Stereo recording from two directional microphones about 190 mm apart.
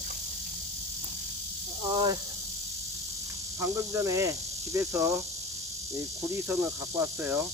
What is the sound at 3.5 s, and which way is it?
Snake, 15° right (ahead or behind).